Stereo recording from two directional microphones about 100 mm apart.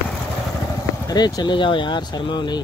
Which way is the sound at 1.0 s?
40° left (ahead or behind).